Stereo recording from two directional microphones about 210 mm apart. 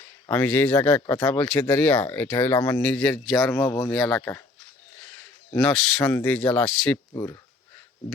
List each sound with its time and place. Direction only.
0.3 s speech: 10° left (ahead or behind)
3.5 s speech: 10° left (ahead or behind)
3.9 s speech: centre (ahead or behind)
5.5 s speech: centre (ahead or behind)
7.1 s speech: 15° left (ahead or behind)